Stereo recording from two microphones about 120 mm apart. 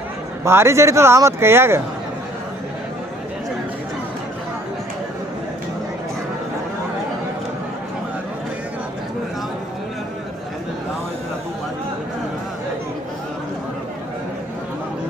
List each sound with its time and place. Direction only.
0.4 s a man's voice: 20° right (ahead or behind)